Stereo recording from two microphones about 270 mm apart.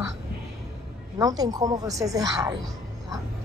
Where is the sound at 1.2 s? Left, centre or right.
Centre.